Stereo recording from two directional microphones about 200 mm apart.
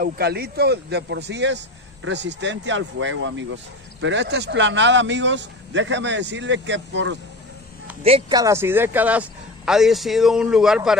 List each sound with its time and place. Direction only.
0.0 s speech: 50° right (ahead or behind)
8.0 s speech: 30° right (ahead or behind)
8.4 s a man's voice: 15° right (ahead or behind)